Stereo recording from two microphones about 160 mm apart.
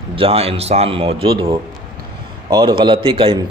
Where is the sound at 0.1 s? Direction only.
35° right (ahead or behind).